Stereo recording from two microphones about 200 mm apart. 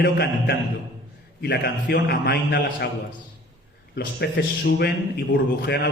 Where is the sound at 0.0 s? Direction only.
55° left (ahead or behind).